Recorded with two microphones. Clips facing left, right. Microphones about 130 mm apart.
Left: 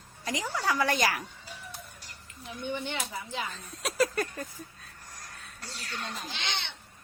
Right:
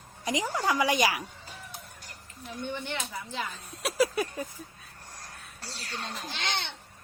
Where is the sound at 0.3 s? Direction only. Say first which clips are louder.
Right 2 dB; 15° right (ahead or behind).